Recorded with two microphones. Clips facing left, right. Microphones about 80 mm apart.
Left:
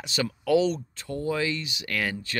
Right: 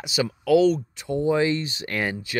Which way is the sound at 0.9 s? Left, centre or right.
Centre.